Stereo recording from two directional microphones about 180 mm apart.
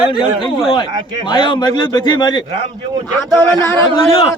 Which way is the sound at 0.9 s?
20° right (ahead or behind).